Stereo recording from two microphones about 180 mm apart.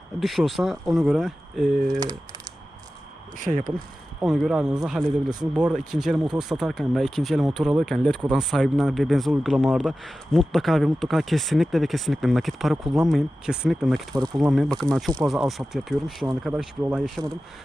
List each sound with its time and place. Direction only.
0.2 s speech: centre (ahead or behind)
1.9 s speech: 20° right (ahead or behind)
3.4 s speech: 45° right (ahead or behind)
4.2 s speech: centre (ahead or behind)
5.0 s speech: 20° right (ahead or behind)
5.5 s speech: 5° right (ahead or behind)